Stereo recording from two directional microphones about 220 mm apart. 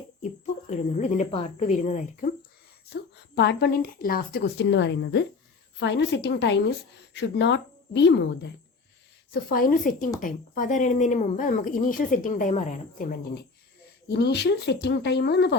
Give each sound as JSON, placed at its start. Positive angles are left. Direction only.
{"t": 0.7, "sound": "speech", "side_deg": 35}
{"t": 2.9, "sound": "a woman's voice", "side_deg": 50}
{"t": 9.3, "sound": "a woman's voice", "side_deg": 40}